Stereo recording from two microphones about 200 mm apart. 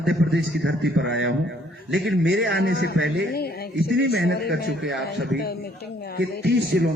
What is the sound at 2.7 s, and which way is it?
Speech, 55° left (ahead or behind).